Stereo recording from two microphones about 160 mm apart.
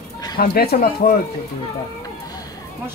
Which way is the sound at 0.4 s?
70° left (ahead or behind).